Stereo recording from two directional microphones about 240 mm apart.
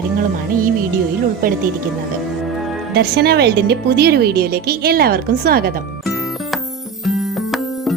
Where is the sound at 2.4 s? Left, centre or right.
Centre.